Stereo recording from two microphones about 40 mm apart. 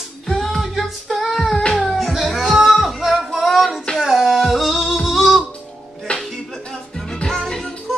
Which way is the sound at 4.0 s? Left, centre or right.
Centre.